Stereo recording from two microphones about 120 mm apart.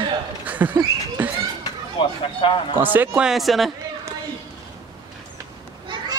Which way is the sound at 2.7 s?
15° right (ahead or behind).